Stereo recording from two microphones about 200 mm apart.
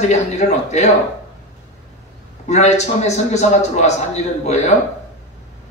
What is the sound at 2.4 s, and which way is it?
A man's voice, 35° left (ahead or behind).